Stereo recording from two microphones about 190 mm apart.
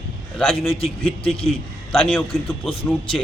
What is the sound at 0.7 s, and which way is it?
Speech, 30° left (ahead or behind).